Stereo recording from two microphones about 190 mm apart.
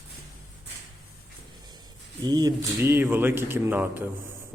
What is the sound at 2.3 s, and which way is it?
Speech, 20° right (ahead or behind).